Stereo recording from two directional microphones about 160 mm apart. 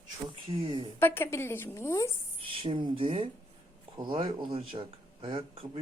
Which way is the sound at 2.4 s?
35° right (ahead or behind).